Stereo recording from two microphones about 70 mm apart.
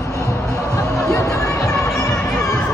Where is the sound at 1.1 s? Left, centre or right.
Left.